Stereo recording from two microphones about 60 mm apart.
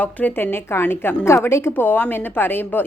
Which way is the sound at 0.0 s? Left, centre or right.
Left.